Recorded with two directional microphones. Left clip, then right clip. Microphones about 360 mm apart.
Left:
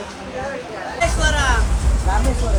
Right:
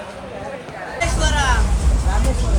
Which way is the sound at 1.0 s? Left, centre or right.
Centre.